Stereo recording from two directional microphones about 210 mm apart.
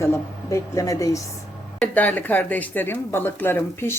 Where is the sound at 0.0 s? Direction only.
15° left (ahead or behind).